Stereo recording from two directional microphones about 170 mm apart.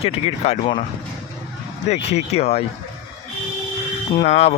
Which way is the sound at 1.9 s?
40° left (ahead or behind).